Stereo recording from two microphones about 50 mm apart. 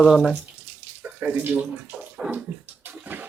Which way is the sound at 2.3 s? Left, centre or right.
Right.